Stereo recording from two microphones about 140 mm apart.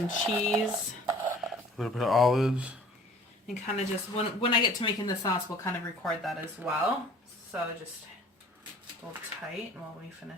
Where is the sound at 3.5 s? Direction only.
45° left (ahead or behind); by 5.7 s 25° left (ahead or behind).